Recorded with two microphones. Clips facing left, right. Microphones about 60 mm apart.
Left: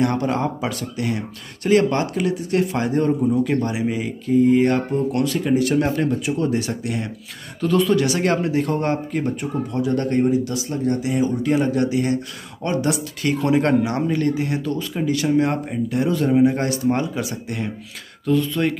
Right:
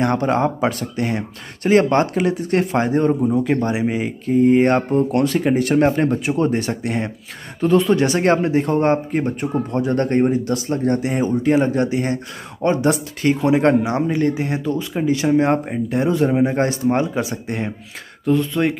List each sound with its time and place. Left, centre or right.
0.0 s speech: right